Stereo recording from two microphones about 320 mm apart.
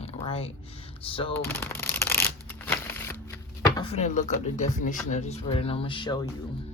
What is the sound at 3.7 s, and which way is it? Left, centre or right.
Speech, centre.